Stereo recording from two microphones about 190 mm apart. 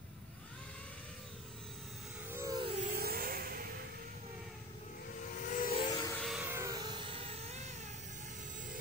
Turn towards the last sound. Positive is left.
turn(degrees=-35)  # may be behind; listen again after turning